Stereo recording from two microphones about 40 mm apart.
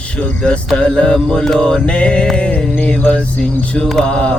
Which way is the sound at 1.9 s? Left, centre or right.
Left.